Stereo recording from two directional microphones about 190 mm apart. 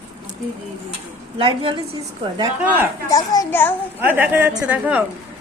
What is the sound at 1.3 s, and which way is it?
Speech, 25° right (ahead or behind).